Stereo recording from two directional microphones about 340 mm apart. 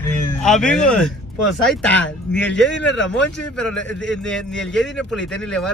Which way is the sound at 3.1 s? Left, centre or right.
Centre.